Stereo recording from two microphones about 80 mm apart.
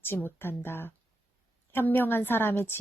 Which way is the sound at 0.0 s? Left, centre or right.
Left.